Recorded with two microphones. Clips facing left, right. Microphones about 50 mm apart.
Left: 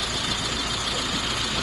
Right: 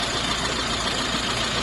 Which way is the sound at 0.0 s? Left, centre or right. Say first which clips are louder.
Right 3 dB; right.